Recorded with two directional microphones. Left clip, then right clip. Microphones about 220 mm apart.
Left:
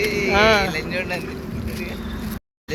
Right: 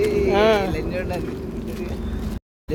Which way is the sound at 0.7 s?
40° right (ahead or behind).